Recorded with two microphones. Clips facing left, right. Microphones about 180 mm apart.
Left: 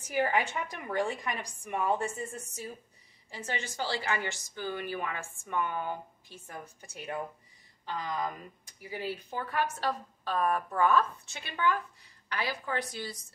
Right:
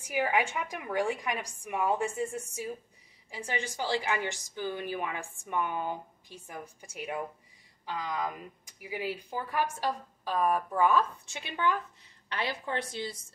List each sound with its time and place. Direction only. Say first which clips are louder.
0.1 s a woman's voice: even; 10° right (ahead or behind); by 13.2 s 25° right (ahead or behind)